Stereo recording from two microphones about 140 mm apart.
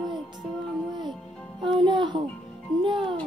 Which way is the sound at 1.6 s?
35° right (ahead or behind).